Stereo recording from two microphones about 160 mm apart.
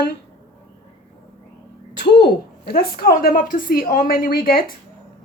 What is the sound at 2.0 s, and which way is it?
A woman's voice, 90° left.